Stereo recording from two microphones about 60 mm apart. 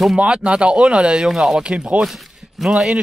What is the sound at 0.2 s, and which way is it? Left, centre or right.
Speech, centre.